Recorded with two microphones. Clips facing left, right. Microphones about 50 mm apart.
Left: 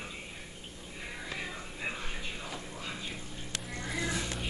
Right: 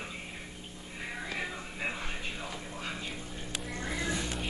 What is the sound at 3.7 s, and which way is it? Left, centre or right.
Music, right.